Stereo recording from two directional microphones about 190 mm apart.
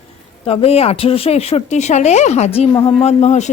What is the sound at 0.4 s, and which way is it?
Speech, 30° left (ahead or behind).